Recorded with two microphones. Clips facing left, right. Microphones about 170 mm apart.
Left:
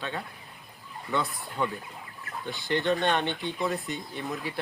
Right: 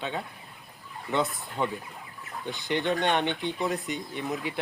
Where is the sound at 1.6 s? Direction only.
20° right (ahead or behind).